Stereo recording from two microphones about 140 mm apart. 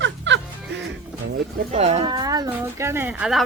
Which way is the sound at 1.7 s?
50° right (ahead or behind).